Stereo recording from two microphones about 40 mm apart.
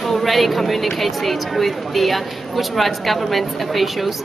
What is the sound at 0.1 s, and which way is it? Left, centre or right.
Speech, centre.